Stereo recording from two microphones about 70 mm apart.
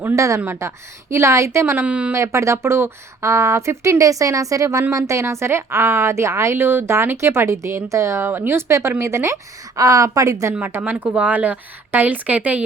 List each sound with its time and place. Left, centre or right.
0.2 s speech: right
1.7 s a woman's voice: right
2.1 s speech: right
8.3 s speech: right
10.7 s speech: right
11.0 s a woman's voice: right